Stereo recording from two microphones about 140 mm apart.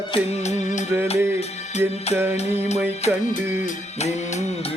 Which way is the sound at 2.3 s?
50° left (ahead or behind).